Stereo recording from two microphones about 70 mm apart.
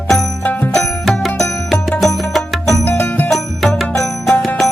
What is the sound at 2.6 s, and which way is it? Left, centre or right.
Music, left.